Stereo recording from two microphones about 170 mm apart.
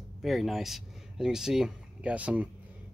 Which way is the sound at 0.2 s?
Centre (ahead or behind).